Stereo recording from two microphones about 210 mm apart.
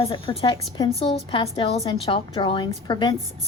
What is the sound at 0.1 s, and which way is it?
A woman's voice, 25° left (ahead or behind).